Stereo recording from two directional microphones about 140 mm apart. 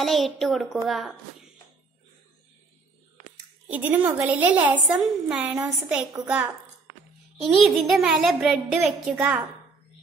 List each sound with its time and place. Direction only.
0.0 s a child's voice: centre (ahead or behind)
3.7 s a woman's voice: 10° right (ahead or behind)
7.5 s a child's voice: centre (ahead or behind)